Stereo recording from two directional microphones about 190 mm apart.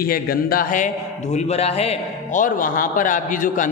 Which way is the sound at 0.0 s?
50° left (ahead or behind).